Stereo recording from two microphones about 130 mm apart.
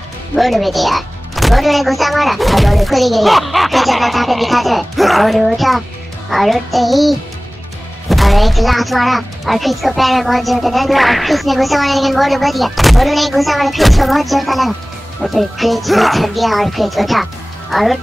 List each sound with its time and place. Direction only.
0.4 s speech: centre (ahead or behind)